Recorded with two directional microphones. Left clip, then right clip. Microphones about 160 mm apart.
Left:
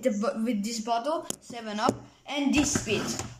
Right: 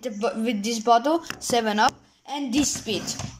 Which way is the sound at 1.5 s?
65° right (ahead or behind).